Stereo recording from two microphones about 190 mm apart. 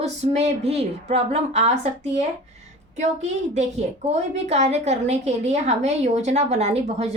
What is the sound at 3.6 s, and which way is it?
A woman's voice, 35° right (ahead or behind).